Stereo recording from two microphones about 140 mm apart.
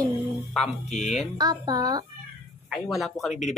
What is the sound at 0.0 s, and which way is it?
Music, 10° left (ahead or behind).